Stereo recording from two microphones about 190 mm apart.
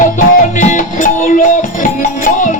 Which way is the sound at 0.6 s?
40° left (ahead or behind).